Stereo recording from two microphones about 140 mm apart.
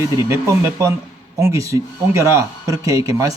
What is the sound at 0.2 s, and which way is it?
Mantra, 20° right (ahead or behind).